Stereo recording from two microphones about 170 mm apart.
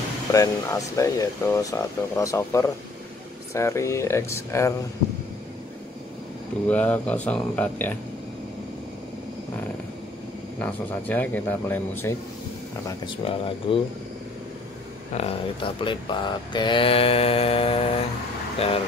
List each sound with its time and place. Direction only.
0.3 s speech: 20° left (ahead or behind)
6.7 s speech: 10° left (ahead or behind)
10.6 s speech: 10° left (ahead or behind)
13.0 s speech: 30° left (ahead or behind)
15.1 s speech: 35° left (ahead or behind)